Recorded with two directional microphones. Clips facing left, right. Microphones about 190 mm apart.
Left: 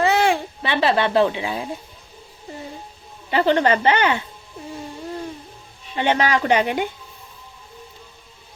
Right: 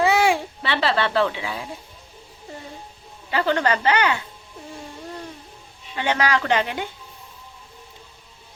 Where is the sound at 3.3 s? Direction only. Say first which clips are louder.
Left 4 dB; 20° left (ahead or behind).